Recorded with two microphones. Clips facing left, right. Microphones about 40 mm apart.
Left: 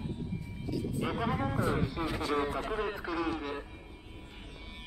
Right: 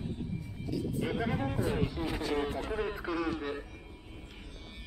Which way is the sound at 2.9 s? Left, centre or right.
Centre.